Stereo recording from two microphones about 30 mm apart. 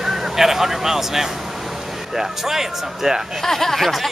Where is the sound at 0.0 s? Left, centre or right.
Centre.